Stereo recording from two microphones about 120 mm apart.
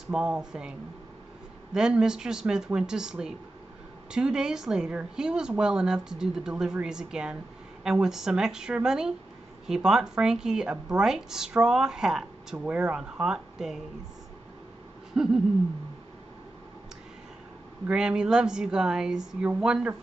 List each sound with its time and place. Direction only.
0.1 s a woman's voice: 5° right (ahead or behind)
15.2 s a woman's voice: 5° right (ahead or behind)
17.8 s speech: 5° right (ahead or behind)